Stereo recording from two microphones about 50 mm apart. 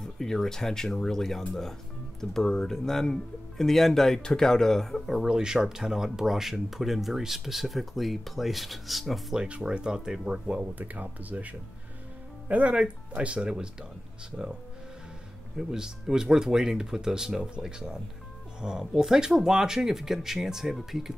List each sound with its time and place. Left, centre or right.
0.0 s speech: centre
5.3 s speech: centre
9.6 s speech: centre
10.7 s speech: right
15.5 s speech: centre